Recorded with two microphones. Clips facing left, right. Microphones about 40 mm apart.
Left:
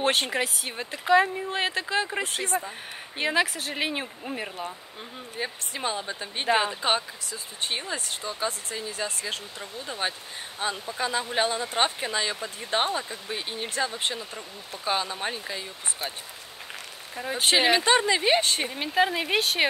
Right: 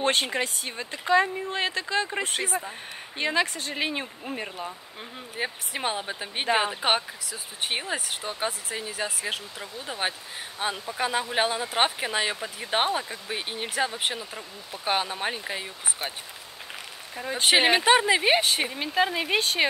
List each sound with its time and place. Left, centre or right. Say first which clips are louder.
0.0 s speech: even; centre
3.2 s speech: left 1 dB; centre
5.4 s speech: right 1 dB; centre
6.4 s speech: left 1 dB; centre
6.7 s speech: right 1 dB; right
8.2 s speech: even; right
8.5 s speech: even; centre
10.7 s speech: right 1 dB; right
15.4 s speech: right 2 dB; right
17.1 s speech: even; centre
17.5 s speech: right 1 dB; centre
17.7 s speech: right 2 dB; right; by 19.6 s centre